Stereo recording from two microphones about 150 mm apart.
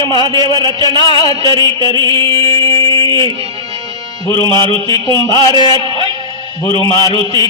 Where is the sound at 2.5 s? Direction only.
20° left (ahead or behind).